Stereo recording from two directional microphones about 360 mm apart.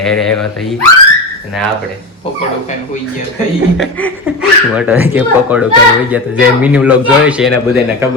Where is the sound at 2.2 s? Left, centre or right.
Centre.